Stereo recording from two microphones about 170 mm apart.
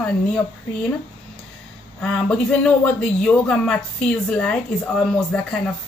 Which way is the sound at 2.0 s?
5° left (ahead or behind).